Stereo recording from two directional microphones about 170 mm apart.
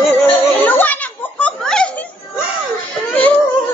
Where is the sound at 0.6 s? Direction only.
10° left (ahead or behind).